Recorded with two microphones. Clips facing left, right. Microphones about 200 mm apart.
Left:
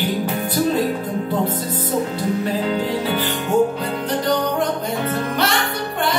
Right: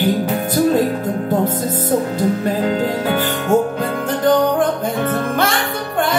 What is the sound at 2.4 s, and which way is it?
Music, 45° right (ahead or behind).